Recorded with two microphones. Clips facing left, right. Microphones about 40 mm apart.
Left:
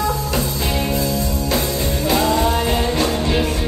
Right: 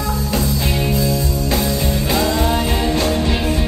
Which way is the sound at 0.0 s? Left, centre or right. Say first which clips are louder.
Even; centre.